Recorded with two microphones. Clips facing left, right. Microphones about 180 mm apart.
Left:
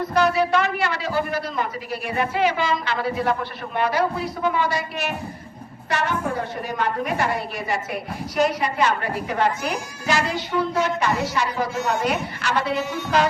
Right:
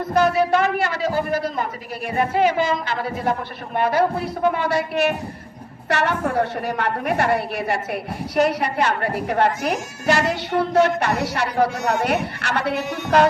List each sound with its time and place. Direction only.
0.0 s a man's voice: 50° right (ahead or behind)